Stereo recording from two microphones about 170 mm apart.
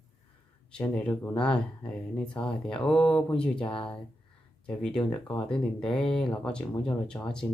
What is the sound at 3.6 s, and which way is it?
Speech, 30° left (ahead or behind).